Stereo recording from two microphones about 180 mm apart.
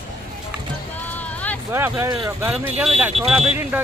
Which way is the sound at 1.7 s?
15° right (ahead or behind).